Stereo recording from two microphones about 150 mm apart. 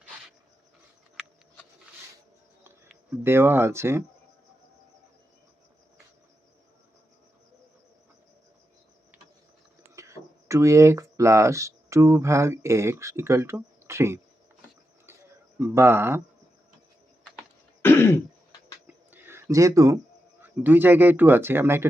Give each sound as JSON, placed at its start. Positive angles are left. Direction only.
{"t": 3.2, "sound": "speech", "side_deg": -15}
{"t": 9.9, "sound": "speech", "side_deg": -20}
{"t": 15.5, "sound": "speech", "side_deg": -15}
{"t": 17.8, "sound": "throat clearing", "side_deg": 15}
{"t": 18.9, "sound": "a sound", "side_deg": -15}
{"t": 20.4, "sound": "speech", "side_deg": -15}